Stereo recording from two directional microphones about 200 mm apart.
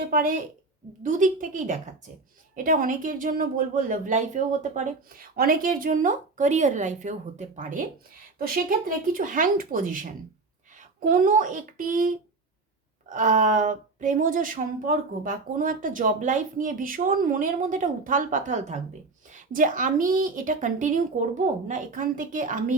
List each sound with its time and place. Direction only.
0.1 s speech: 45° right (ahead or behind)